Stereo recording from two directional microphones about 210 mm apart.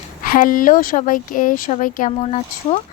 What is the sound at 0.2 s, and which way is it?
A woman's voice, 40° left (ahead or behind).